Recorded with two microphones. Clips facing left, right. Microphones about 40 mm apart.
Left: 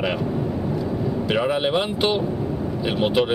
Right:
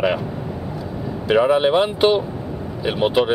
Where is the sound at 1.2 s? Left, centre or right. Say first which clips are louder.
Right 8 dB; centre.